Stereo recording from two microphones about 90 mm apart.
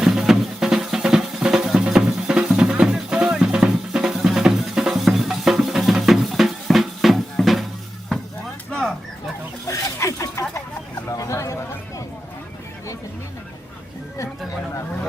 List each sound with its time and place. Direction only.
0.0 s music: 5° right (ahead or behind)
8.7 s fowl: 5° left (ahead or behind)
9.6 s a sound: 35° left (ahead or behind)